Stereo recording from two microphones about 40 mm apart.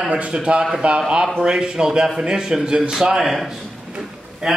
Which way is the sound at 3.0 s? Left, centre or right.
Centre.